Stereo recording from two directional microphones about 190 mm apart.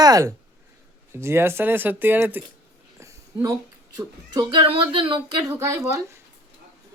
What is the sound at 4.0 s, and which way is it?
Speech, 25° right (ahead or behind).